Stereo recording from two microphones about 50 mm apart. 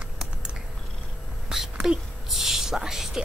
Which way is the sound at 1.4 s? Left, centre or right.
Centre.